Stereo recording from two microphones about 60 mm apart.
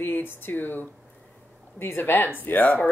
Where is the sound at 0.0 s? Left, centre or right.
Left.